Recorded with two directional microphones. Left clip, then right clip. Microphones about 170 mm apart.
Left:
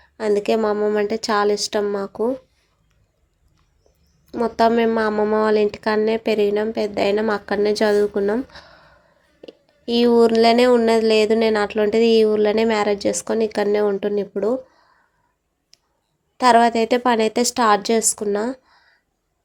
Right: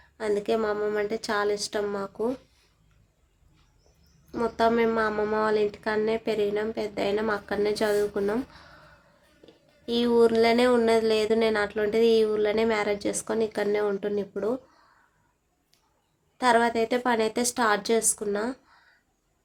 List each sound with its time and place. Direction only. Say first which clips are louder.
0.0 s speech: left 8 dB; 35° left (ahead or behind)
4.3 s speech: left 7 dB; 30° left (ahead or behind)
15.7 s a sound: left 11 dB; 35° left (ahead or behind)
16.4 s speech: left 8 dB; 35° left (ahead or behind)